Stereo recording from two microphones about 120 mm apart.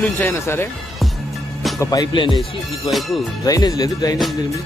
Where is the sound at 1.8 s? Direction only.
30° left (ahead or behind).